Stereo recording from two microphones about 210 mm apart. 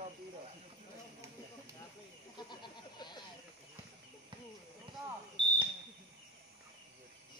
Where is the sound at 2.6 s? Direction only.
20° left (ahead or behind).